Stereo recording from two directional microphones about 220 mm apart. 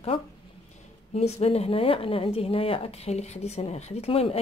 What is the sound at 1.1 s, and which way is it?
Speech, 30° left (ahead or behind).